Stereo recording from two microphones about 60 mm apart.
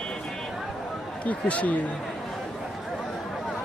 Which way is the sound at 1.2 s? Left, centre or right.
Left.